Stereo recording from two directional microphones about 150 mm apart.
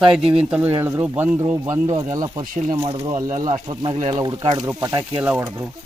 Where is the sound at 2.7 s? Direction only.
40° right (ahead or behind).